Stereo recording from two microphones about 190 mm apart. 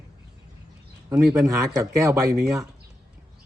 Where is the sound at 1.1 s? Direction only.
15° right (ahead or behind).